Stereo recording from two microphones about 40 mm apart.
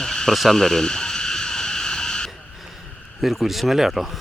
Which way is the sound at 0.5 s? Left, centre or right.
Centre.